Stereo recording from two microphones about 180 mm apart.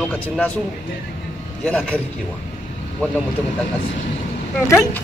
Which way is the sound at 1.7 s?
10° left (ahead or behind).